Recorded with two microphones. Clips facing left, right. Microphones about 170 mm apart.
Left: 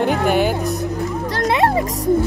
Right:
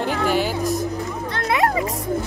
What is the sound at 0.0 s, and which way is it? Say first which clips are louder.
Music: left 4 dB; 60° left (ahead or behind).